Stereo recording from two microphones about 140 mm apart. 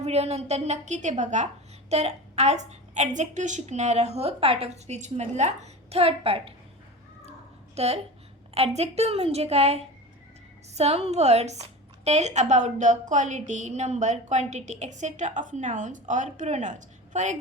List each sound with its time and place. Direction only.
0.0 s a woman's voice: 50° right (ahead or behind)
7.8 s a woman's voice: 50° right (ahead or behind)